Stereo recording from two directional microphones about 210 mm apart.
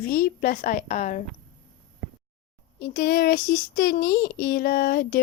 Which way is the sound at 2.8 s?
50° left (ahead or behind).